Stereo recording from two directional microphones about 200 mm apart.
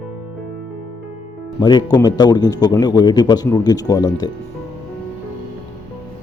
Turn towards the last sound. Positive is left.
turn(degrees=20)  # may be behind; listen again after turning